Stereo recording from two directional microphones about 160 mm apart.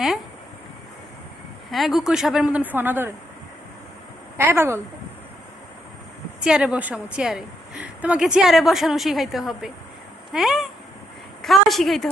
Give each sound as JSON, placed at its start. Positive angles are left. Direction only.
{"t": 1.7, "sound": "a woman's voice", "side_deg": 0}
{"t": 4.4, "sound": "speech", "side_deg": -15}
{"t": 6.4, "sound": "a woman's voice", "side_deg": -5}